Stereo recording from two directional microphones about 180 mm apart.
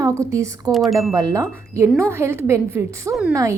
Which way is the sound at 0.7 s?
Centre (ahead or behind).